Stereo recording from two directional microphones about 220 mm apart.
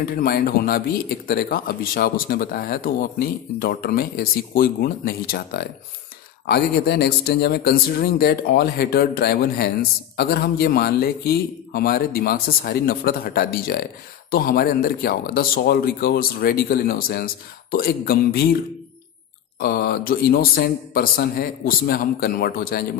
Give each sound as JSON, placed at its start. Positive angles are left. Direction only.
{"t": 0.0, "sound": "speech", "side_deg": 40}
{"t": 19.6, "sound": "speech", "side_deg": 45}